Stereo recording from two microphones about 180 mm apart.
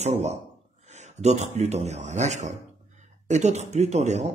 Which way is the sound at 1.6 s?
40° right (ahead or behind).